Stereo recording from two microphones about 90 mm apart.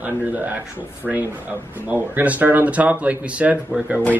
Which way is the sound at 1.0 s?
Centre (ahead or behind).